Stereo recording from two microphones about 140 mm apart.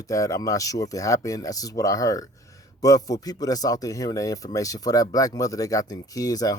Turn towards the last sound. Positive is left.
turn(degrees=25)  # may be behind; listen again after turning